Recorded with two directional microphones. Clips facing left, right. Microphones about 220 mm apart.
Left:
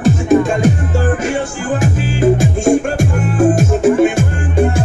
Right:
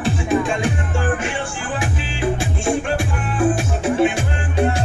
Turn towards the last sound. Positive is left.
turn(degrees=45)  # may be behind; listen again after turning